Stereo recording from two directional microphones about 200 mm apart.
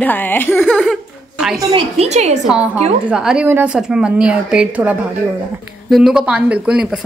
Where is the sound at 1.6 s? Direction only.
20° right (ahead or behind).